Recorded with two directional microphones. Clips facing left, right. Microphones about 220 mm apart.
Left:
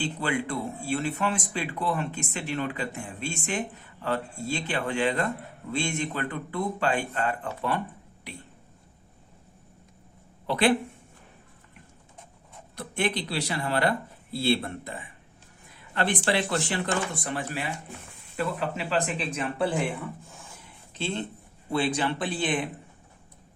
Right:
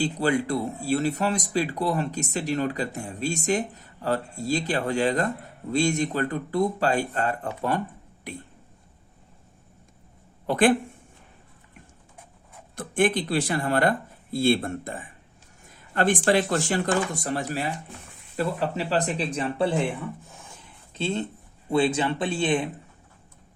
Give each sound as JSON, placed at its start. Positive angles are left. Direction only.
{"t": 0.0, "sound": "speech", "side_deg": -40}
{"t": 10.4, "sound": "speech", "side_deg": -45}
{"t": 12.7, "sound": "speech", "side_deg": -50}
{"t": 21.7, "sound": "speech", "side_deg": -25}